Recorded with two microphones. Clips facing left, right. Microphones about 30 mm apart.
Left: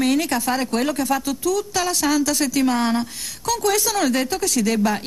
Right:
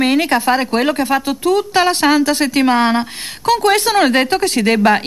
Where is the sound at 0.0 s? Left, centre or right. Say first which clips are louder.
Right 6 dB; right.